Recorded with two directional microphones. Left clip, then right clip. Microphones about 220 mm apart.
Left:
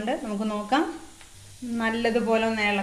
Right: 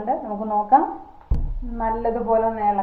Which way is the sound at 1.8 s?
60° left (ahead or behind).